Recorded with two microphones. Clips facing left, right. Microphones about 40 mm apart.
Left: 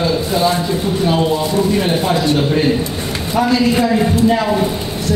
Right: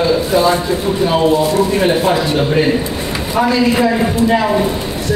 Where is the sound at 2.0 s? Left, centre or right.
Centre.